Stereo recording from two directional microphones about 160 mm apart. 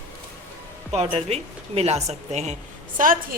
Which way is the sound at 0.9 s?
40° right (ahead or behind).